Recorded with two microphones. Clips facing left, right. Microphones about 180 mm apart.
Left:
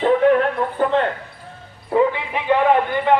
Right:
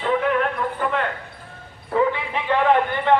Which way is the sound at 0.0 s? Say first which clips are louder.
Left 6 dB; 40° left (ahead or behind).